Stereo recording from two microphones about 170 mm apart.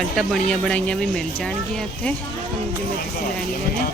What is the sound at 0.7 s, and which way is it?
Speech, 5° left (ahead or behind).